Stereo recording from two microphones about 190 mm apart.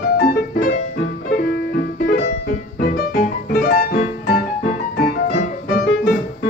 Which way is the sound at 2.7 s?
50° left (ahead or behind).